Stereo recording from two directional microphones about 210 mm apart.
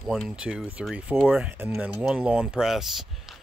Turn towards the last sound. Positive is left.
turn(degrees=0)  # may be behind; listen again after turning